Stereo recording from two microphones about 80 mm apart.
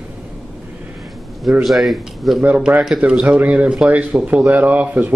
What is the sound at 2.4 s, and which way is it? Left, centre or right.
Speech, centre.